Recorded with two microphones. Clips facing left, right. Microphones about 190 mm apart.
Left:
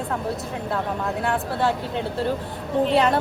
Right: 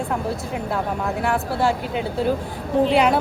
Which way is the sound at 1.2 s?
5° right (ahead or behind).